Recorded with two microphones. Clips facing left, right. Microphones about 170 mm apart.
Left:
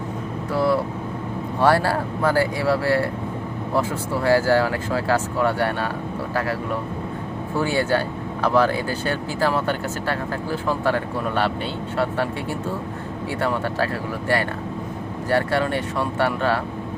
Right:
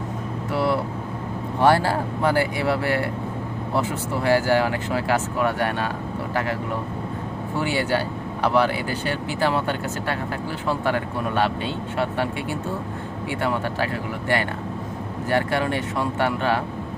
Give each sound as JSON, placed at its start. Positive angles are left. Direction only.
{"t": 0.5, "sound": "vehicle", "side_deg": -20}
{"t": 1.6, "sound": "speech", "side_deg": -20}
{"t": 7.9, "sound": "speech", "side_deg": -15}
{"t": 11.9, "sound": "speech", "side_deg": -20}
{"t": 15.3, "sound": "speech", "side_deg": -20}